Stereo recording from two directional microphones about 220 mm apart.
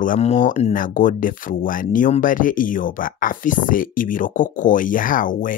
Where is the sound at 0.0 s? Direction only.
35° left (ahead or behind).